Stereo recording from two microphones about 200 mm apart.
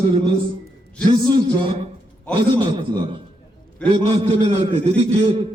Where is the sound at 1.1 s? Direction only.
20° right (ahead or behind).